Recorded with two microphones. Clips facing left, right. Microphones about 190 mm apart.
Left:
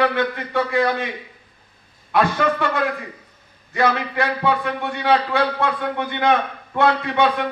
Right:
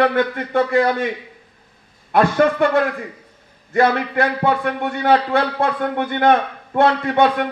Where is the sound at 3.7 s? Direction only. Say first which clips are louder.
Right 4 dB; 50° right (ahead or behind).